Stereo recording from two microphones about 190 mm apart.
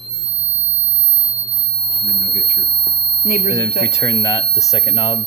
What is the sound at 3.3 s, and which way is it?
Speech, 40° left (ahead or behind).